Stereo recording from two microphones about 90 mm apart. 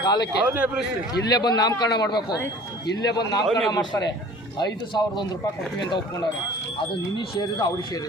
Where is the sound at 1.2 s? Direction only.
50° left (ahead or behind).